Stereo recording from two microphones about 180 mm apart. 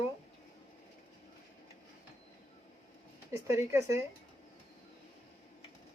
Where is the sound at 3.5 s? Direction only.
15° right (ahead or behind).